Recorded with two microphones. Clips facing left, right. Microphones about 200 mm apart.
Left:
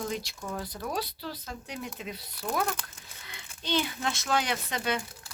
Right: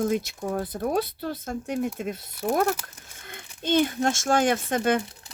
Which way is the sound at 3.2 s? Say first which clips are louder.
Right 8 dB; 50° right (ahead or behind).